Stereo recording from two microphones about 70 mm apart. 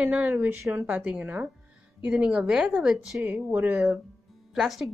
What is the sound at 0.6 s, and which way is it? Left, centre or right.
Speech, right.